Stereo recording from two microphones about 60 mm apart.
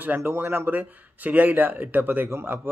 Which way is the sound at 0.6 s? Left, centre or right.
Right.